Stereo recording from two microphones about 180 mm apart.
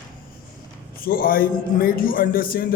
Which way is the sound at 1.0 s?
55° left (ahead or behind).